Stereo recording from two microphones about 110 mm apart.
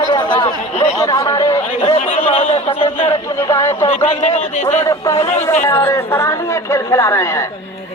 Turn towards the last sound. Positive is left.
turn(degrees=30)  # may be behind; listen again after turning